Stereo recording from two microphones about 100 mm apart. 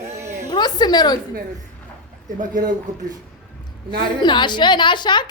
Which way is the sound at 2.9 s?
40° right (ahead or behind).